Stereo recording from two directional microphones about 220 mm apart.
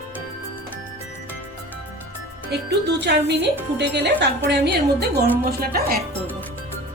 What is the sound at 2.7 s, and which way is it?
Speech, 50° right (ahead or behind).